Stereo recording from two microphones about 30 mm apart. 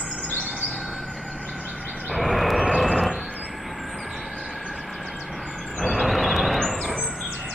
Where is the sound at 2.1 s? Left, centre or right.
Centre.